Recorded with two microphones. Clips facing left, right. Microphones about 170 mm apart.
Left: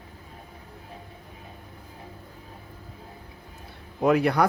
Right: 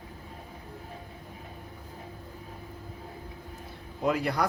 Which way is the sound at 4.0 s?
65° left (ahead or behind).